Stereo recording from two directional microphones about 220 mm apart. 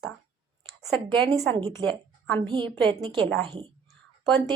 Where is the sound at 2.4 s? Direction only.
20° right (ahead or behind).